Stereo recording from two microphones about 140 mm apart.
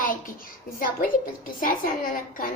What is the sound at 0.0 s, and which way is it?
A woman's voice, 85° left.